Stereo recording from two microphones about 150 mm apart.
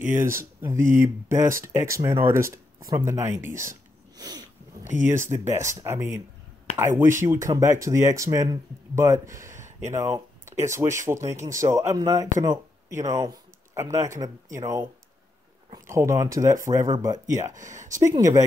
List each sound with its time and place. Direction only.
0.6 s speech: 15° right (ahead or behind)
4.2 s sneeze: 25° right (ahead or behind)
5.0 s speech: 15° right (ahead or behind)
9.6 s a sound: 55° right (ahead or behind)
9.9 s speech: 25° right (ahead or behind)